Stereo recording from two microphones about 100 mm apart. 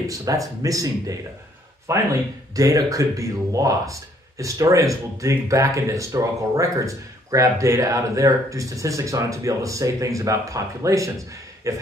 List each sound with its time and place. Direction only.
0.1 s speech: 35° right (ahead or behind)